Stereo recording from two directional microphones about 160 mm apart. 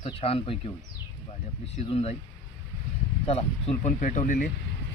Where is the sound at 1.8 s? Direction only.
40° left (ahead or behind).